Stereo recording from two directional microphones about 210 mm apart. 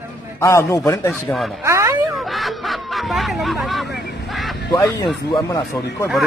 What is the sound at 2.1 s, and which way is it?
A man's voice, centre (ahead or behind).